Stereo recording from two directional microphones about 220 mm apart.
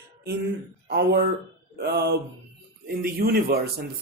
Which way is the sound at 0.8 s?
50° right (ahead or behind).